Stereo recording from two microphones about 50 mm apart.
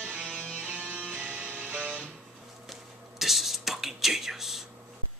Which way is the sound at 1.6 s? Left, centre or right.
Right.